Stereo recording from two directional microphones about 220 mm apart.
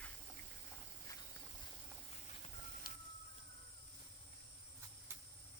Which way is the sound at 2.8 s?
40° left (ahead or behind).